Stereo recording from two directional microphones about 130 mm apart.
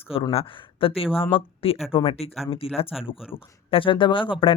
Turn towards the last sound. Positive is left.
turn(degrees=40)  # may be behind; listen again after turning